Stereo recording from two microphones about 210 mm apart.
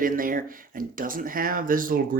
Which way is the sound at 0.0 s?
40° right (ahead or behind).